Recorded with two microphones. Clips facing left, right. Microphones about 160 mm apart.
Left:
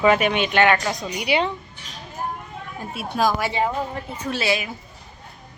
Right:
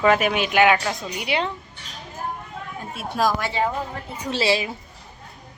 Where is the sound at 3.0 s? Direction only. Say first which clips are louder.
Left 1 dB; centre (ahead or behind).